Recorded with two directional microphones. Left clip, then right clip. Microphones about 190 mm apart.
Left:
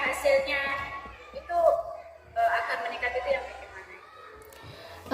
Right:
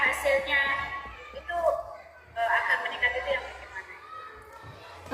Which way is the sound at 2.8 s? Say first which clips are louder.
Right 1 dB; 30° left (ahead or behind).